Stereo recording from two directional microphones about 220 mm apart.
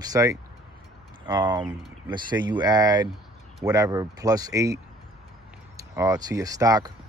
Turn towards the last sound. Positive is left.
turn(degrees=-15)  # may be behind; listen again after turning